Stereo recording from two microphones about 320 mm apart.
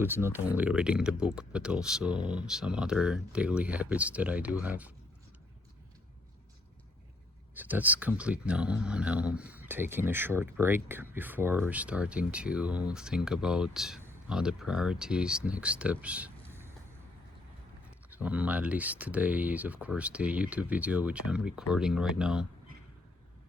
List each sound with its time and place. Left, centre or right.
0.0 s speech: centre
7.5 s speech: centre
18.1 s speech: centre